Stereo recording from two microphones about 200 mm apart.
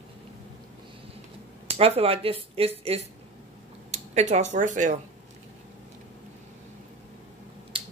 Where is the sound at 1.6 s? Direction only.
30° right (ahead or behind).